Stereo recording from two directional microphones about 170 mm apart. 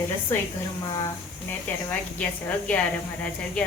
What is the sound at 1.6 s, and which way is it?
Speech, 10° left (ahead or behind).